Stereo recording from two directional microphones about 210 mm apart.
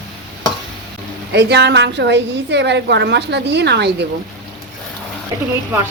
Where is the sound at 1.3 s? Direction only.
55° right (ahead or behind).